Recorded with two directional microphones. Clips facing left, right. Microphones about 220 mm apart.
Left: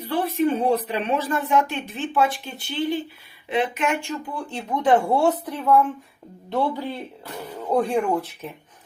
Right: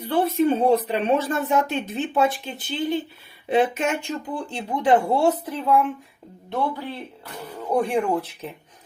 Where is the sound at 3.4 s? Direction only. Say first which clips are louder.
Right 3 dB; 25° right (ahead or behind).